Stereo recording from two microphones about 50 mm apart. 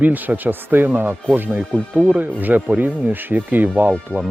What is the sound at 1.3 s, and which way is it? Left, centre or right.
Speech, right.